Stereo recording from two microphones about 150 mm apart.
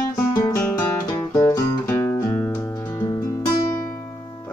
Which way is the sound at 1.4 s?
15° left (ahead or behind).